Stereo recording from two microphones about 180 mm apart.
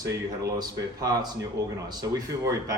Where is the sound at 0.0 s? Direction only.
20° right (ahead or behind).